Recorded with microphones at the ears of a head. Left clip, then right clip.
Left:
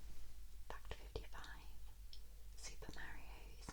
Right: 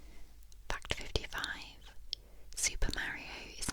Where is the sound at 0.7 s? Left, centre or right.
Right.